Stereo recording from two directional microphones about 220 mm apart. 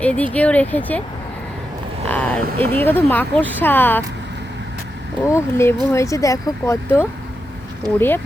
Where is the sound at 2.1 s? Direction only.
10° left (ahead or behind).